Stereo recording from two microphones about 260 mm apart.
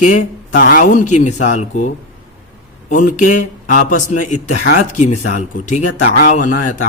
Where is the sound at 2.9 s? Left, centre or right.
Left.